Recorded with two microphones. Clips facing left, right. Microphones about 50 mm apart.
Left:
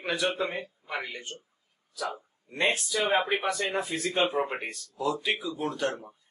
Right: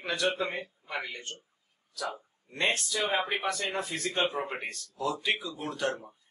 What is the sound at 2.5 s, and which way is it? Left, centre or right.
A man's voice, centre.